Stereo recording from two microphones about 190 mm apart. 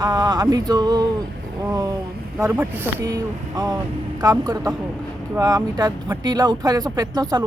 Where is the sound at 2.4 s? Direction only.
10° right (ahead or behind).